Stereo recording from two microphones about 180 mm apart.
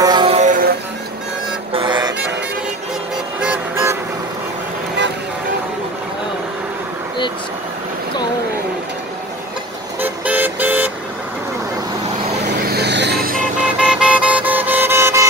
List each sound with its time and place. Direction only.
0.0 s music: 25° right (ahead or behind); by 0.7 s 45° right (ahead or behind)
1.7 s music: 25° right (ahead or behind)
3.3 s music: 10° right (ahead or behind)
9.9 s vehicle: 10° right (ahead or behind)
12.6 s a sound: 65° right (ahead or behind)
13.6 s music: 5° right (ahead or behind)